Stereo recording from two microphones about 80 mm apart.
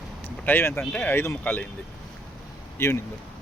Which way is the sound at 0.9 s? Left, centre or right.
Left.